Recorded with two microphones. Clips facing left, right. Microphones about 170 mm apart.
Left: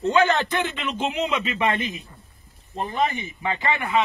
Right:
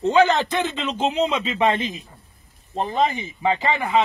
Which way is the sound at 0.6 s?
30° right (ahead or behind).